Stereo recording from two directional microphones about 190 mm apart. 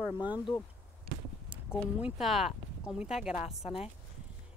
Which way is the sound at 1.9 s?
5° right (ahead or behind).